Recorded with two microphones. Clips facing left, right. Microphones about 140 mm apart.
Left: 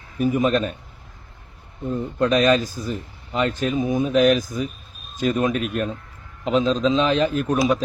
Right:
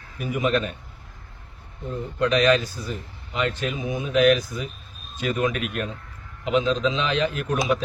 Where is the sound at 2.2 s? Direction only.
45° left (ahead or behind).